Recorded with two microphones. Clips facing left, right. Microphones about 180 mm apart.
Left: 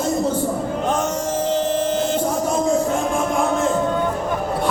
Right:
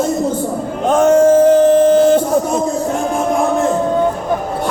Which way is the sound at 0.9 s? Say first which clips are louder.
Right 17 dB; 55° right (ahead or behind).